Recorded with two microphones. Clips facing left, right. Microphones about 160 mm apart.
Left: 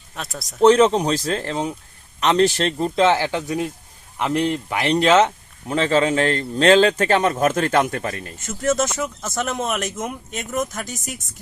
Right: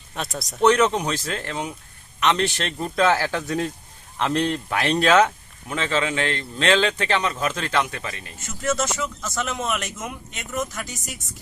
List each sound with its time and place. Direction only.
0.2 s speech: centre (ahead or behind)
0.6 s speech: 30° left (ahead or behind)
5.6 s a man's voice: 35° left (ahead or behind)